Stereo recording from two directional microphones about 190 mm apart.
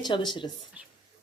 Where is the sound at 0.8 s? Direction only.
10° right (ahead or behind).